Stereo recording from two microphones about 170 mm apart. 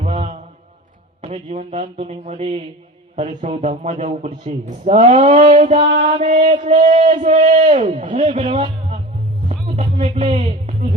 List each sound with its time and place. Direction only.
0.0 s mantra: 40° right (ahead or behind)
1.2 s a man's voice: 45° right (ahead or behind)
5.7 s a man's voice: 30° right (ahead or behind)
6.0 s a man's voice: 40° right (ahead or behind)
8.2 s a man's voice: 30° right (ahead or behind)
9.7 s music: 40° right (ahead or behind)